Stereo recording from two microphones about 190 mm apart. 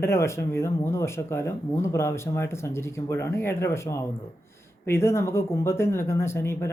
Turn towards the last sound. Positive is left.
turn(degrees=15)  # may be behind; listen again after turning